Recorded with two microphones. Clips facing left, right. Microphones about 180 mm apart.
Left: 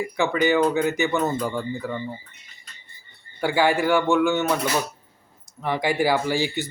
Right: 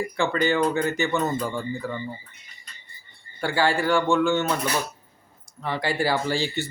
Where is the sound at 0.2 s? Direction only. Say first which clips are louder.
Left 3 dB; 15° left (ahead or behind).